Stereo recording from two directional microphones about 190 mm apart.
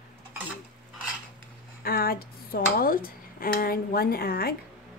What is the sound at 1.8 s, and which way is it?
Speech, 50° left (ahead or behind).